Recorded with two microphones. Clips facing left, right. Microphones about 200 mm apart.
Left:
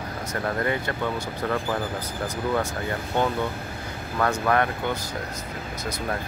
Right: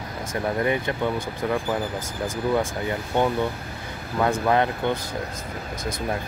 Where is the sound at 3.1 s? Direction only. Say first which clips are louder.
Right 2 dB; 15° right (ahead or behind).